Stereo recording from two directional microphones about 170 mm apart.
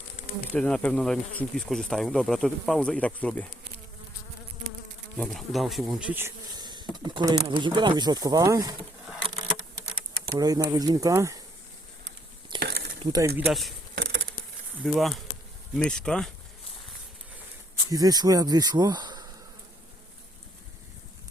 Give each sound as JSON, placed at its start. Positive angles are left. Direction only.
{"t": 0.5, "sound": "speech", "side_deg": 5}
{"t": 5.1, "sound": "speech", "side_deg": 0}
{"t": 6.6, "sound": "a sound", "side_deg": -25}
{"t": 7.4, "sound": "speech", "side_deg": -30}
{"t": 10.2, "sound": "speech", "side_deg": -20}
{"t": 12.5, "sound": "a sound", "side_deg": -70}
{"t": 13.1, "sound": "speech", "side_deg": -20}
{"t": 13.3, "sound": "speech", "side_deg": 0}
{"t": 13.9, "sound": "a sound", "side_deg": -85}
{"t": 14.8, "sound": "speech", "side_deg": 0}
{"t": 17.9, "sound": "speech", "side_deg": -20}